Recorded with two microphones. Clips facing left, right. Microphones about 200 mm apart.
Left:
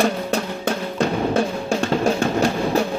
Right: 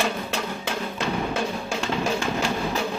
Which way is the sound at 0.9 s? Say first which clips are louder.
Left 8 dB; 40° left (ahead or behind).